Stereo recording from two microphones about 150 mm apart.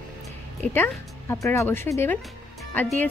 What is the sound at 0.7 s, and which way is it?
Speech, 15° left (ahead or behind).